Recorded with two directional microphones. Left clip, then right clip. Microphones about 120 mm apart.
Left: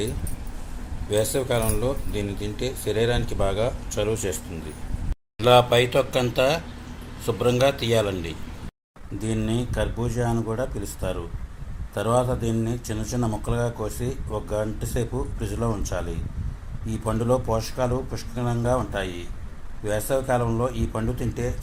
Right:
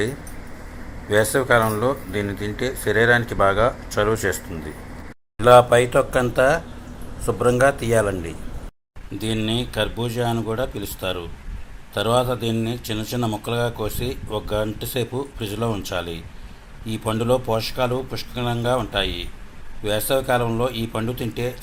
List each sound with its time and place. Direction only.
1.1 s a man's voice: 15° right (ahead or behind)
5.4 s a man's voice: 10° right (ahead or behind)
9.1 s a man's voice: 15° right (ahead or behind)